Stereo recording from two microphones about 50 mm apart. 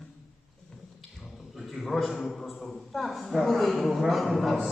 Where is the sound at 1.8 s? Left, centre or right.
Centre.